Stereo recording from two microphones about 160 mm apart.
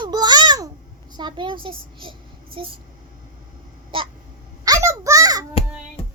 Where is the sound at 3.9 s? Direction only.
35° right (ahead or behind).